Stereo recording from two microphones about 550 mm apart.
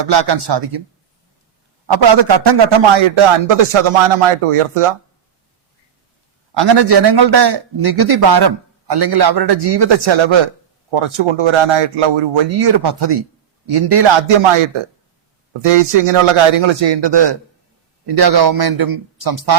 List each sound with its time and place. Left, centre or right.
0.0 s a man's voice: right
1.9 s a man's voice: right
6.5 s a man's voice: right
15.6 s a man's voice: right